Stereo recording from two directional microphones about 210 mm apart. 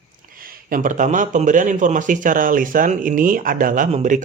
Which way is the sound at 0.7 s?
40° right (ahead or behind).